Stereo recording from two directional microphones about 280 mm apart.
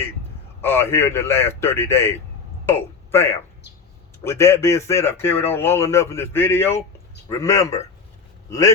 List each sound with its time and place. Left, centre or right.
0.6 s a man's voice: centre